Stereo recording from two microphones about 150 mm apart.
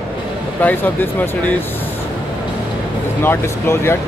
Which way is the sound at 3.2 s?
15° left (ahead or behind).